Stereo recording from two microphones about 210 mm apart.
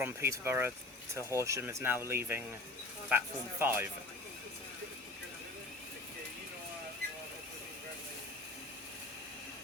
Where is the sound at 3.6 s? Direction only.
10° right (ahead or behind).